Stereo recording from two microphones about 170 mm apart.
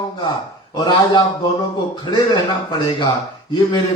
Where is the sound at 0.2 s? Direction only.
25° left (ahead or behind).